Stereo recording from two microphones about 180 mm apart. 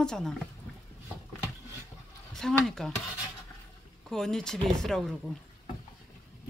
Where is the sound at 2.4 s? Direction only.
Centre (ahead or behind).